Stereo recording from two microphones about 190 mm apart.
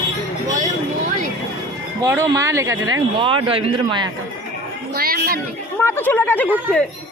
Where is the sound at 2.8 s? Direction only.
90° right.